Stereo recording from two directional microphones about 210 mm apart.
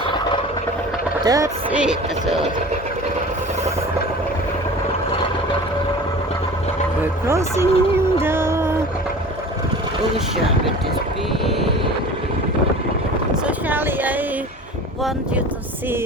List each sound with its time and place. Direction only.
1.2 s speech: 15° right (ahead or behind)
1.7 s speech: 5° right (ahead or behind)
7.0 s speech: 15° right (ahead or behind)
13.7 s speech: 10° right (ahead or behind)